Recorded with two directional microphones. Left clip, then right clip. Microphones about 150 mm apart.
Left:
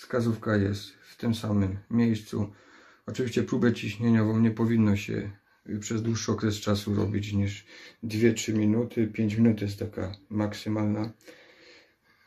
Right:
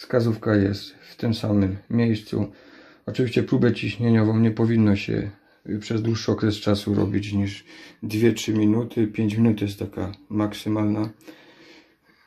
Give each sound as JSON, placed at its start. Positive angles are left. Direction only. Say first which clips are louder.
{"t": 0.1, "sound": "speech", "louder": "right 6 dB", "side_deg": -50}